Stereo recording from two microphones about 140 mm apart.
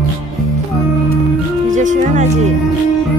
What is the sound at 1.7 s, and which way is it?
Music, 65° right (ahead or behind).